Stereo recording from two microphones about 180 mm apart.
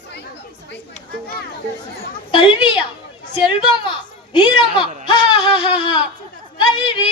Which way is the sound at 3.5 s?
25° left (ahead or behind).